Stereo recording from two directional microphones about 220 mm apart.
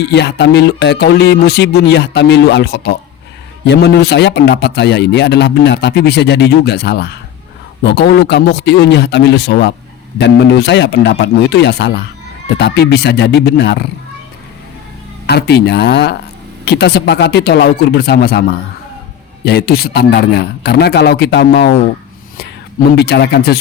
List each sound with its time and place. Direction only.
0.0 s a man's voice: 50° left (ahead or behind)
15.3 s a man's voice: 50° left (ahead or behind)
19.5 s a man's voice: 45° left (ahead or behind)
23.0 s a man's voice: 50° left (ahead or behind)